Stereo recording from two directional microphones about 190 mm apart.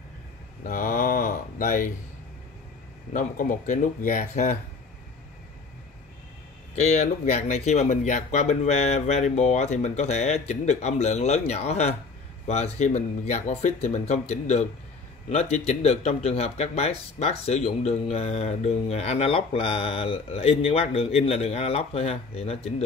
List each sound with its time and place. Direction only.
0.7 s mantra: 45° left (ahead or behind)
3.1 s speech: 45° left (ahead or behind)
6.7 s speech: 35° left (ahead or behind)